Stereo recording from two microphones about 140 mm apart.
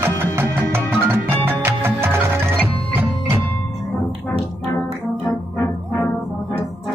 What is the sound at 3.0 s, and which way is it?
Music, 20° right (ahead or behind).